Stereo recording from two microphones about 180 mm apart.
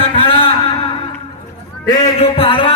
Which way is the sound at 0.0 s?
30° left (ahead or behind).